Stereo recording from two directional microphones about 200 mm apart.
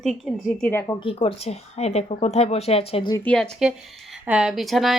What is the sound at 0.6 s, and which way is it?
Speech, 10° left (ahead or behind).